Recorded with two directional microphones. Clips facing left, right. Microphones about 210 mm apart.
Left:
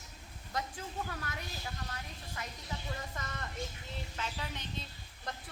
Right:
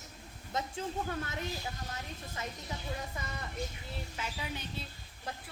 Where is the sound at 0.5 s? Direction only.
25° right (ahead or behind).